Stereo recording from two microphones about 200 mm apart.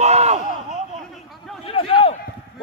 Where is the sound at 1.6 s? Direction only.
25° left (ahead or behind).